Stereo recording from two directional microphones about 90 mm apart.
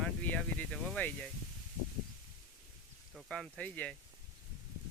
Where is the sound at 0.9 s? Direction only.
15° left (ahead or behind).